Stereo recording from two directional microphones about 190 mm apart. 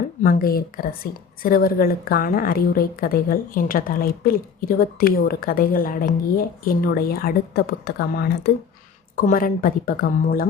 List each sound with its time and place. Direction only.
0.2 s a woman's voice: 45° left (ahead or behind)